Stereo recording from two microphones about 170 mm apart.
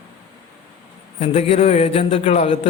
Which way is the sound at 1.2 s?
35° left (ahead or behind).